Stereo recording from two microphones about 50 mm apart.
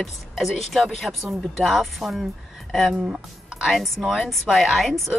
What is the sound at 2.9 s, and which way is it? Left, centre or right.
Speech, right.